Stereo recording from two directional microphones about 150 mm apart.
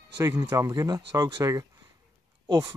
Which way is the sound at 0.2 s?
20° right (ahead or behind).